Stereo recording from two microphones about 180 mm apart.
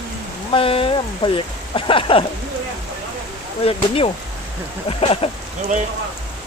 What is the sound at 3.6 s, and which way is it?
Speech, 30° left (ahead or behind).